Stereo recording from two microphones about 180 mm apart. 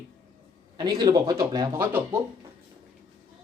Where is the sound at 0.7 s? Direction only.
20° right (ahead or behind).